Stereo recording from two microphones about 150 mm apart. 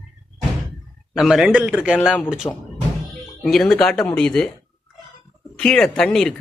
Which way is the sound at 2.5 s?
20° left (ahead or behind).